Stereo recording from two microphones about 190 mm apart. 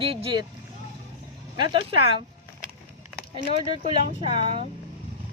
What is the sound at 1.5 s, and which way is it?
Speech, 25° right (ahead or behind).